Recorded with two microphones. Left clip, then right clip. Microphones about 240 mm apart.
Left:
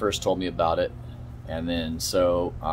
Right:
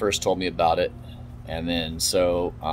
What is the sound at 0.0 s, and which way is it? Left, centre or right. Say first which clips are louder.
Speech: right 2 dB; centre.